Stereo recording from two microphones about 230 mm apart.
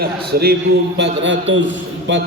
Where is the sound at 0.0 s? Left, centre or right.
Right.